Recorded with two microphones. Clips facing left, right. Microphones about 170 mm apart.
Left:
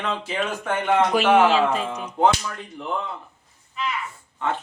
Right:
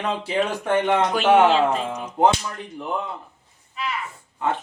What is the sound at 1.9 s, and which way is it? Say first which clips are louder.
Speech: right 1 dB; 10° right (ahead or behind).